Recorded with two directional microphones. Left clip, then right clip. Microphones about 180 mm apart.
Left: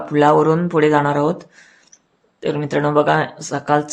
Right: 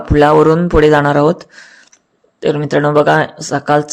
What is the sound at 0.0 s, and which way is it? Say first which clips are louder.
Speech: right 5 dB; 30° right (ahead or behind).